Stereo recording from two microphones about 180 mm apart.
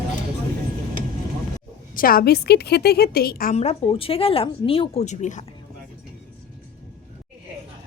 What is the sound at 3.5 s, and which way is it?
A woman's voice, 35° left (ahead or behind).